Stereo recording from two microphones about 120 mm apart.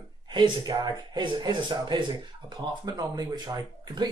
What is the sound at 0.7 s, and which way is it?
Speech, 40° right (ahead or behind).